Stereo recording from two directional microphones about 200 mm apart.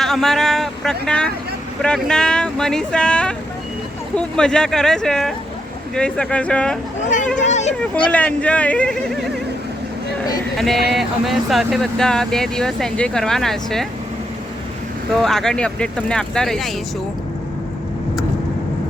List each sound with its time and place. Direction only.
0.0 s speech: centre (ahead or behind)
7.3 s a sound: 35° left (ahead or behind)
8.1 s speech: 5° left (ahead or behind)
10.6 s speech: centre (ahead or behind)
15.2 s speech: centre (ahead or behind)